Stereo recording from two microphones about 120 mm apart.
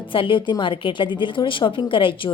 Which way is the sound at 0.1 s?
45° left (ahead or behind).